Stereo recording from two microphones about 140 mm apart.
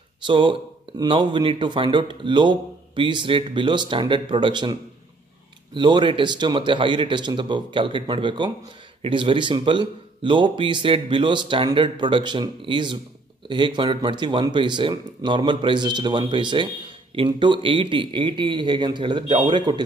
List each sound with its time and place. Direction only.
0.2 s speech: 35° right (ahead or behind)
5.8 s speech: 35° right (ahead or behind)